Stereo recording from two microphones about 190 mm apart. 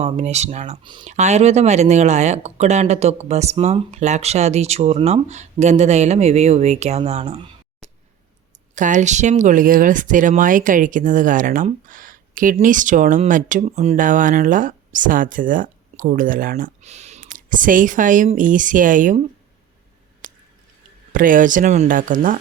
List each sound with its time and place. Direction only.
0.0 s speech: 35° right (ahead or behind)
0.8 s speech: 25° right (ahead or behind)
1.0 s speech: 35° right (ahead or behind)
20.2 s squish: 45° right (ahead or behind)
21.1 s speech: 45° right (ahead or behind)